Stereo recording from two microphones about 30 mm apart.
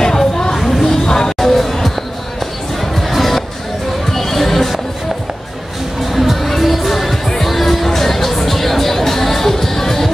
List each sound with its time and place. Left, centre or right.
0.0 s a sound: centre
1.0 s music: left
1.4 s music: centre
6.1 s music: centre